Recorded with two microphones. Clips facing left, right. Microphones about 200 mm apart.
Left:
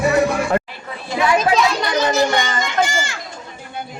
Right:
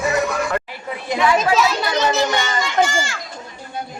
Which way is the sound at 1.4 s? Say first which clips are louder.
Left 1 dB; 5° right (ahead or behind).